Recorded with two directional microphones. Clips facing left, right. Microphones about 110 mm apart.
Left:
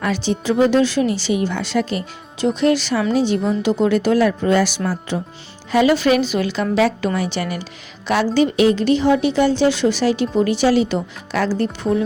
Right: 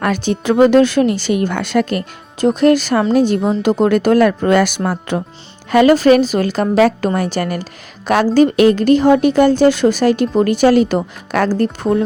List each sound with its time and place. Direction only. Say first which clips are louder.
0.0 s a woman's voice: right 3 dB; 55° right (ahead or behind)